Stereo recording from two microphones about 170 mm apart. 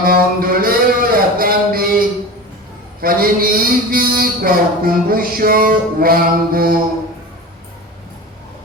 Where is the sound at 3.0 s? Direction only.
60° right (ahead or behind).